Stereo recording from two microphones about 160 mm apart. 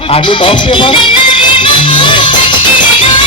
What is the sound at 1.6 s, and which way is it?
Music, 30° left (ahead or behind).